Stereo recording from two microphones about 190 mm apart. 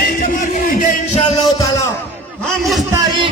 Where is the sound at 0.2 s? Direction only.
45° left (ahead or behind).